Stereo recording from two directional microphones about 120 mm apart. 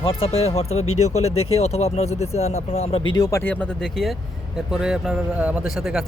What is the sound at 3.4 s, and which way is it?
Speech, 10° left (ahead or behind).